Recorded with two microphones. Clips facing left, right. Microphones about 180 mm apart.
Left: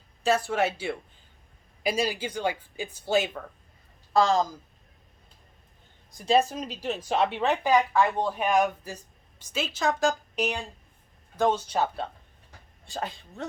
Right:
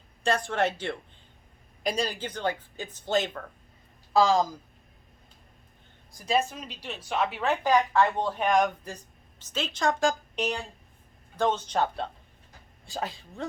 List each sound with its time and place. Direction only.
0.2 s speech: 5° left (ahead or behind)
4.1 s a woman's voice: centre (ahead or behind)
6.1 s speech: 25° left (ahead or behind)
7.3 s speech: 20° left (ahead or behind)
8.0 s a woman's voice: 5° left (ahead or behind)